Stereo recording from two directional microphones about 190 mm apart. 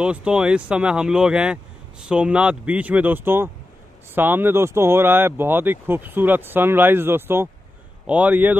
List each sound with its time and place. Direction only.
0.0 s speech: 5° right (ahead or behind)